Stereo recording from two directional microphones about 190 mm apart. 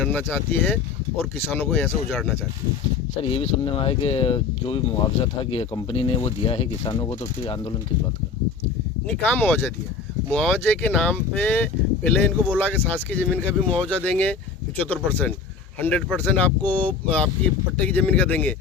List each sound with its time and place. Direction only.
0.0 s speech: 10° left (ahead or behind)
3.2 s speech: 30° left (ahead or behind)
9.0 s speech: 5° left (ahead or behind)